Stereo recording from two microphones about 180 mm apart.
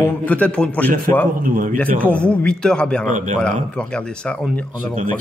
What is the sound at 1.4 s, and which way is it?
Speech, 50° right (ahead or behind).